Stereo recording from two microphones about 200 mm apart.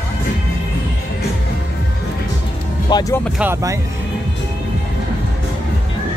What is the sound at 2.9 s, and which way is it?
Speech, 10° left (ahead or behind).